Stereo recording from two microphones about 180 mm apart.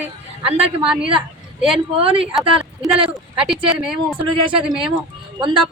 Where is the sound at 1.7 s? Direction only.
30° right (ahead or behind).